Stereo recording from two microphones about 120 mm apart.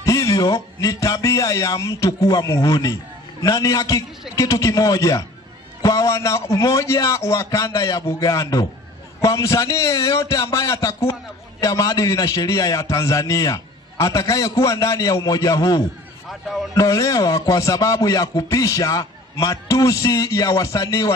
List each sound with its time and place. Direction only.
0.0 s a man's voice: 25° left (ahead or behind)